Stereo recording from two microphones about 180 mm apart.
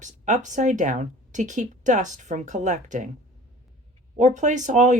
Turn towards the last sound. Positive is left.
turn(degrees=-45)  # may be behind; listen again after turning